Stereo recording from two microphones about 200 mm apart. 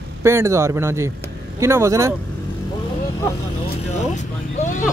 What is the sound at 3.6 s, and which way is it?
Vehicle, 35° left (ahead or behind).